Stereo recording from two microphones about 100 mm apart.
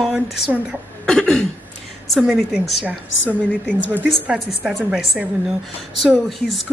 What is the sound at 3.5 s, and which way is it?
Speech, 15° left (ahead or behind).